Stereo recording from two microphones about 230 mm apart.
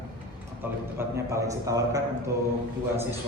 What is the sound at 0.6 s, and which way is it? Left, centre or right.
A man's voice, centre.